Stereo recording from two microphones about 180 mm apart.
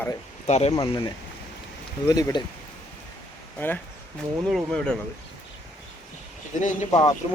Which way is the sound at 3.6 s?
10° left (ahead or behind).